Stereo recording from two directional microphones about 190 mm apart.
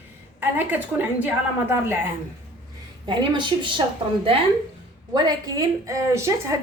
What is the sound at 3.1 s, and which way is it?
Speech, 25° right (ahead or behind).